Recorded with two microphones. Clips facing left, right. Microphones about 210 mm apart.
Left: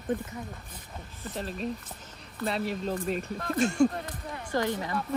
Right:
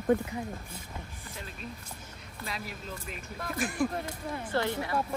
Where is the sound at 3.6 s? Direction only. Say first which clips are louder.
Left 7 dB; 25° left (ahead or behind).